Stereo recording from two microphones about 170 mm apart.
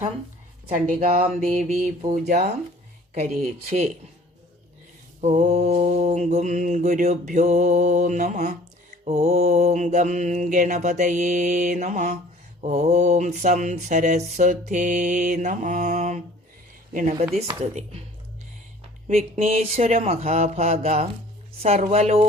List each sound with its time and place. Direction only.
0.9 s mantra: 50° right (ahead or behind)
2.1 s speech: 65° right (ahead or behind)
3.2 s speech: 40° right (ahead or behind)
5.2 s mantra: 45° right (ahead or behind)
19.0 s speech: 40° right (ahead or behind)